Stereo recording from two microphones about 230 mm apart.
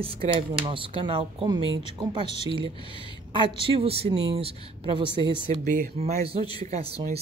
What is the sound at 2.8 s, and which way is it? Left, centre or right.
Speech, left.